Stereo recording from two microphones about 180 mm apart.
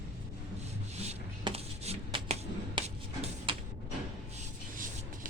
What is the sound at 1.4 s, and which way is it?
Hands, 35° right (ahead or behind).